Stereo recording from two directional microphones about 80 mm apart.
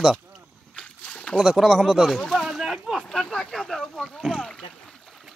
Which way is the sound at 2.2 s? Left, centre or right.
Centre.